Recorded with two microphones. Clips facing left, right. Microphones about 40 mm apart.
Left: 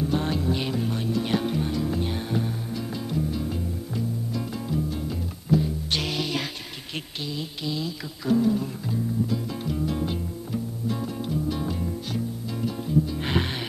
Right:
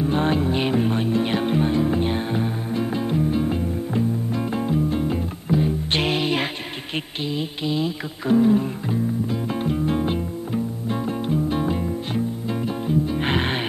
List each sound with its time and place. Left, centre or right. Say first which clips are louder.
0.0 s music: right 5 dB; right